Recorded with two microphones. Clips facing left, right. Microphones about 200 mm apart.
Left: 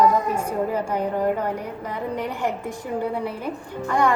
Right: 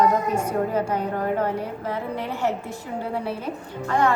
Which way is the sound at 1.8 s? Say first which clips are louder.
Left 3 dB; 15° left (ahead or behind).